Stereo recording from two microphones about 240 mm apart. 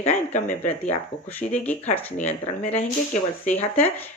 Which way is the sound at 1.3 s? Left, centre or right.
Centre.